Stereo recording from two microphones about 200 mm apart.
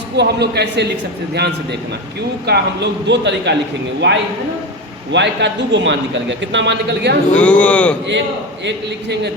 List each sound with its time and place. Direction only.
0.2 s a man's voice: 55° right (ahead or behind)
2.5 s a man's voice: 60° right (ahead or behind)
7.3 s speech: 5° left (ahead or behind)
8.6 s a man's voice: 60° right (ahead or behind)